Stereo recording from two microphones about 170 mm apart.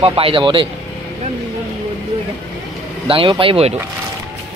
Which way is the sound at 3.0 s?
30° right (ahead or behind).